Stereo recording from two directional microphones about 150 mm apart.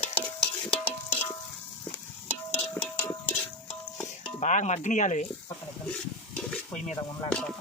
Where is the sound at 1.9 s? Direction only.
40° left (ahead or behind).